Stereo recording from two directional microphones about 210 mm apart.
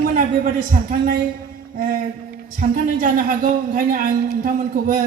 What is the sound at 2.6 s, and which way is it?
A man's voice, 40° right (ahead or behind).